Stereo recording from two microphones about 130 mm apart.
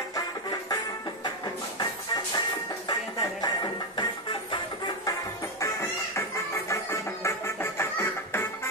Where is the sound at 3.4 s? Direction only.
30° left (ahead or behind).